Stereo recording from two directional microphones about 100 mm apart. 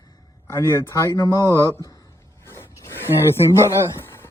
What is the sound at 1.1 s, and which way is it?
Speech, 35° left (ahead or behind).